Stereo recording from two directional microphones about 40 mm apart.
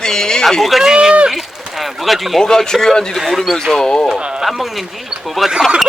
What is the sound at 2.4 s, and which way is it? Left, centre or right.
Speech, centre.